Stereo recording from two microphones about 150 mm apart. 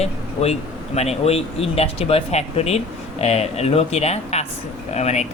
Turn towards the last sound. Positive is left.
turn(degrees=50)  # may be behind; listen again after turning